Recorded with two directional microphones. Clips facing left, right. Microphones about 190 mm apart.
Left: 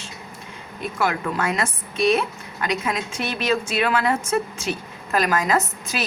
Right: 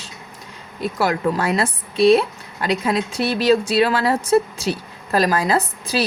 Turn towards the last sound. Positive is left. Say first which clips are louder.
# right 3 dB
turn(degrees=-35)  # may be behind; listen again after turning